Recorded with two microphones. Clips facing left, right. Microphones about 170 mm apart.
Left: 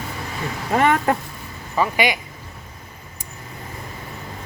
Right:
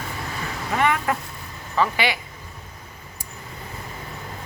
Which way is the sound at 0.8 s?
35° left (ahead or behind).